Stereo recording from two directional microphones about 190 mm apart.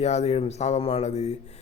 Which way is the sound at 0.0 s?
35° left (ahead or behind).